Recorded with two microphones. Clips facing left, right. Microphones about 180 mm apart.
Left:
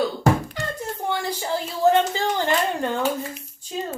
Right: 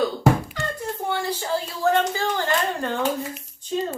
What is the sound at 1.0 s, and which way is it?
A woman's voice, 15° left (ahead or behind).